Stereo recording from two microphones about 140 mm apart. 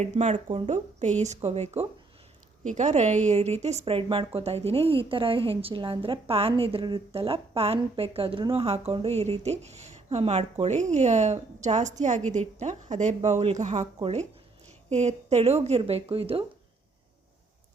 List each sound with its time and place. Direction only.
0.0 s a woman's voice: 55° right (ahead or behind)
14.8 s a woman's voice: 50° right (ahead or behind)